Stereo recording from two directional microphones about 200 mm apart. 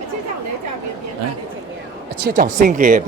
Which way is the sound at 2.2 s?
45° right (ahead or behind).